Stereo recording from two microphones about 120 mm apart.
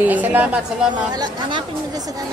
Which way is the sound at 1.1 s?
40° right (ahead or behind).